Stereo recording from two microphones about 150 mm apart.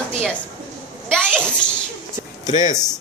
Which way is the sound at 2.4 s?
55° left (ahead or behind).